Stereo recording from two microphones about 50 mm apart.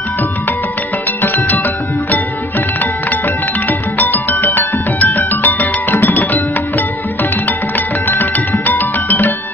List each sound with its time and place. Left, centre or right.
1.2 s music: left
3.6 s music: left
7.4 s music: left